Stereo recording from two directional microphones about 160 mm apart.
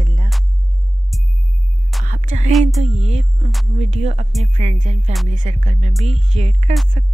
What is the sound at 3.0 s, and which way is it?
Speech, 45° right (ahead or behind).